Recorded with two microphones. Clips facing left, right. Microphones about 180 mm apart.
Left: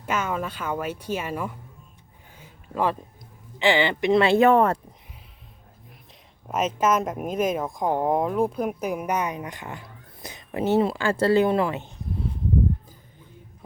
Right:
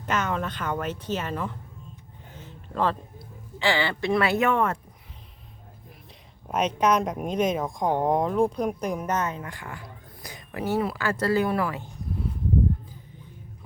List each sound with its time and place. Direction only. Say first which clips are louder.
0.0 s speech: even; 10° left (ahead or behind)
2.3 s a sound: left 1 dB; 10° left (ahead or behind)
3.6 s speech: left 4 dB; 20° left (ahead or behind); by 4.8 s 35° left (ahead or behind)
6.5 s speech: even; 5° left (ahead or behind); by 11.9 s 25° left (ahead or behind)